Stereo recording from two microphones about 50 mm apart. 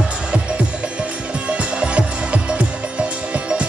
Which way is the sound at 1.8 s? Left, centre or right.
Right.